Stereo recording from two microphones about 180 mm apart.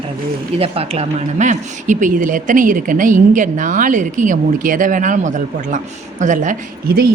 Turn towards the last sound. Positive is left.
turn(degrees=-55)  # may be behind; listen again after turning